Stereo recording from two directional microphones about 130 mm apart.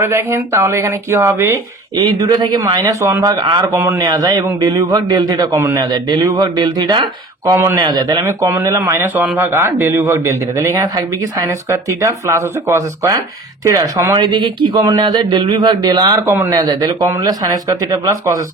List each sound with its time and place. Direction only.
0.0 s speech: 20° right (ahead or behind)
2.0 s speech: 30° right (ahead or behind)
3.8 s speech: 20° right (ahead or behind)
5.5 s a man's voice: 20° right (ahead or behind)
5.8 s speech: 30° right (ahead or behind)
7.5 s speech: 20° right (ahead or behind)
7.8 s speech: 30° right (ahead or behind)
8.2 s speech: 20° right (ahead or behind)
14.2 s speech: 40° right (ahead or behind)